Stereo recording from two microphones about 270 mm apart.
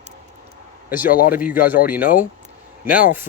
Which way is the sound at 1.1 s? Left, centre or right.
Left.